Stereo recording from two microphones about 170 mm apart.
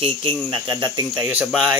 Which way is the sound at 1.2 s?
5° right (ahead or behind).